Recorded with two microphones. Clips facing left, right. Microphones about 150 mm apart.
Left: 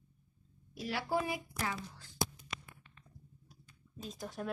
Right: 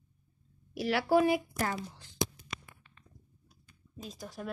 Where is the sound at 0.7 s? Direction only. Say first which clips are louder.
Right 9 dB; 85° right.